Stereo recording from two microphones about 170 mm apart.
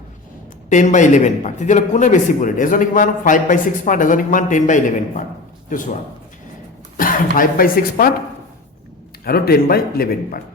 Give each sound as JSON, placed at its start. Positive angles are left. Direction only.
{"t": 0.7, "sound": "a man's voice", "side_deg": 45}
{"t": 6.9, "sound": "a man's voice", "side_deg": 55}
{"t": 9.2, "sound": "a man's voice", "side_deg": 65}